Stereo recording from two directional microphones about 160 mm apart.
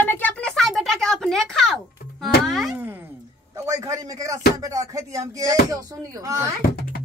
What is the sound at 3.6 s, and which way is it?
Speech, 20° right (ahead or behind).